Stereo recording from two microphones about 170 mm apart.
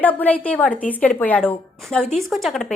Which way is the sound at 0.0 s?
10° left (ahead or behind).